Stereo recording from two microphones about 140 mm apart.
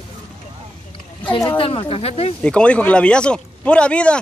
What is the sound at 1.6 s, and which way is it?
Speech, 40° left (ahead or behind).